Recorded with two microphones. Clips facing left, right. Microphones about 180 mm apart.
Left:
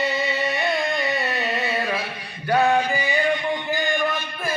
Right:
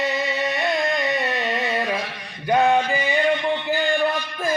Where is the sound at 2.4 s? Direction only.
10° right (ahead or behind).